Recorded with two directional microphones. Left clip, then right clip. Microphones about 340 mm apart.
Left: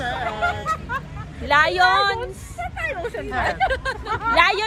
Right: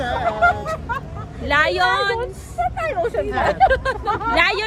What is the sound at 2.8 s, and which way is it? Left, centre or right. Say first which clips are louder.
Vehicle: right 3 dB; right.